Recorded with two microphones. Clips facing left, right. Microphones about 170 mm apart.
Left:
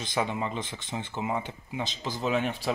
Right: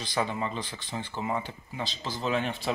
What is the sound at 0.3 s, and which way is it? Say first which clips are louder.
Speech: left 1 dB; 15° left (ahead or behind).